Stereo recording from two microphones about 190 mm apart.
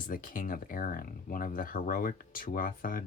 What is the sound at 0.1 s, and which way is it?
Speech, 45° left (ahead or behind).